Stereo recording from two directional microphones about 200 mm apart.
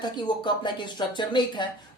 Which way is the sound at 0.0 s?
20° left (ahead or behind).